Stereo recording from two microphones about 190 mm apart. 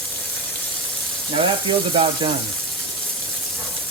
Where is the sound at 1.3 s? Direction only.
25° right (ahead or behind).